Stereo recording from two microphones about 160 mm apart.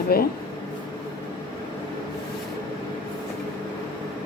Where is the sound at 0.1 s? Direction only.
75° left (ahead or behind).